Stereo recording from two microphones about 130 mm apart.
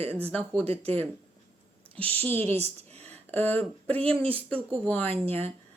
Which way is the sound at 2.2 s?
15° left (ahead or behind).